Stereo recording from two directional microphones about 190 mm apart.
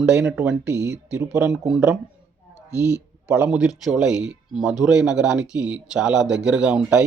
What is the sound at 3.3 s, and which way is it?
Speech, 15° right (ahead or behind).